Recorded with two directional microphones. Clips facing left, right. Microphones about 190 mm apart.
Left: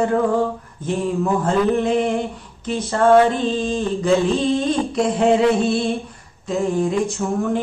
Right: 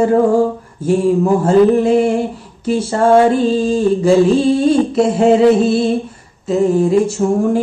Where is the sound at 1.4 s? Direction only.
5° right (ahead or behind).